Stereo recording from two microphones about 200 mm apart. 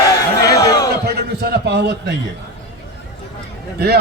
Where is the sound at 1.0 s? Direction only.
50° right (ahead or behind).